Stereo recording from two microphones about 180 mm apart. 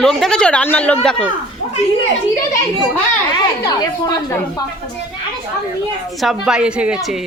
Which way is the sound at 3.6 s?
20° left (ahead or behind).